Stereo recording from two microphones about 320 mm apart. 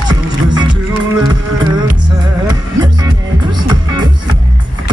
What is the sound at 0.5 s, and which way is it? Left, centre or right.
Music, centre.